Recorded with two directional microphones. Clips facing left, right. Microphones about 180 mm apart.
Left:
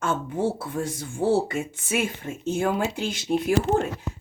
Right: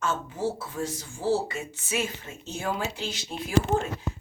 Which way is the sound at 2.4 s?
50° left (ahead or behind).